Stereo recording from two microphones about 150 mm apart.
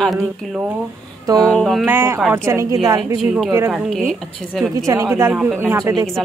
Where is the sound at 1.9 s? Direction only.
15° right (ahead or behind).